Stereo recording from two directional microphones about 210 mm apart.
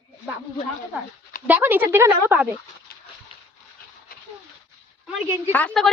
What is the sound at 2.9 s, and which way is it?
Dog, 45° left (ahead or behind).